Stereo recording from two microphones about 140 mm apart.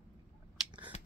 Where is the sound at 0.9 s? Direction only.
50° left (ahead or behind).